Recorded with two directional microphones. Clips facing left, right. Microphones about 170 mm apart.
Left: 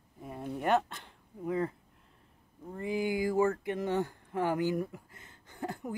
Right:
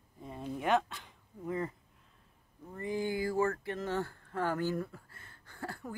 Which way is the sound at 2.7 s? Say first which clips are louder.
Left 2 dB; 10° left (ahead or behind).